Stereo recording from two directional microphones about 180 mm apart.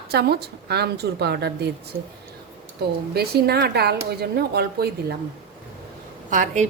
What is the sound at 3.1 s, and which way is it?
A woman's voice, 60° right (ahead or behind).